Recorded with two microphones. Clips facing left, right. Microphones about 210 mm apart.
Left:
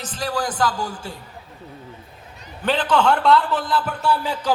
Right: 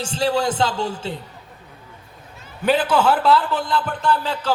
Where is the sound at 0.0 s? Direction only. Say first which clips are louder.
Right 5 dB; 30° right (ahead or behind).